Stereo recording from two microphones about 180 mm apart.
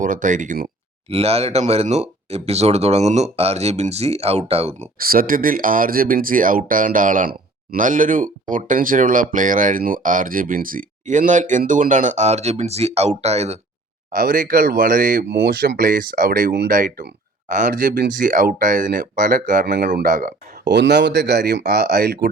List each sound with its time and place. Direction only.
0.0 s speech: 45° right (ahead or behind)
1.1 s speech: 35° right (ahead or behind)
4.9 s speech: 55° right (ahead or behind); by 13.6 s 35° right (ahead or behind)
14.1 s speech: 50° right (ahead or behind)
20.7 s speech: 75° right (ahead or behind)